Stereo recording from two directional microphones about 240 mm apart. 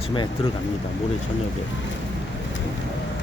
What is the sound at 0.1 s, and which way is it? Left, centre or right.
Speech, left.